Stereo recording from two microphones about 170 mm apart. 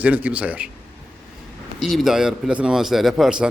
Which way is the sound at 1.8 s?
Centre (ahead or behind).